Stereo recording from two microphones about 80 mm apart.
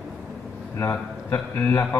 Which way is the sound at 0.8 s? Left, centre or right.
Left.